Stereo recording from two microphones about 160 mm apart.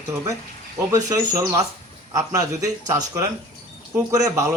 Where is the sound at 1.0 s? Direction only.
20° right (ahead or behind).